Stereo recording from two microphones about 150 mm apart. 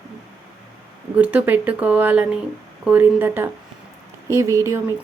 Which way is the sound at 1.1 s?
10° right (ahead or behind).